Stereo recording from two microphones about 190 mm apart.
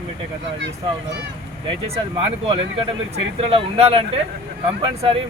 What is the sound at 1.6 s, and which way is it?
Speech, 30° right (ahead or behind).